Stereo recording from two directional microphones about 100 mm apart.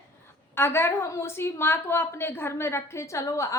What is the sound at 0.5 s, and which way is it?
A woman's voice, 25° left (ahead or behind).